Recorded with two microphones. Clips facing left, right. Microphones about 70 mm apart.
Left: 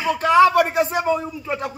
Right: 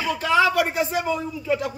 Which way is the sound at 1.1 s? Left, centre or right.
Left.